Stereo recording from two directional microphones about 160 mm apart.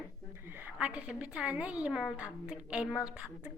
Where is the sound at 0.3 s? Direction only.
15° right (ahead or behind).